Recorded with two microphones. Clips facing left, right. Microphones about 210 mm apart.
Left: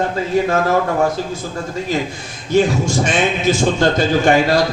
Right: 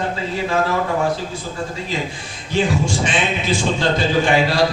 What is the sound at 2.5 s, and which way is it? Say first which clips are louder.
A man's voice: left 4 dB; 45° left (ahead or behind).